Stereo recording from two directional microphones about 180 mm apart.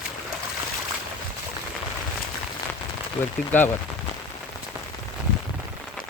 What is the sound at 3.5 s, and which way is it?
Speech, 10° left (ahead or behind).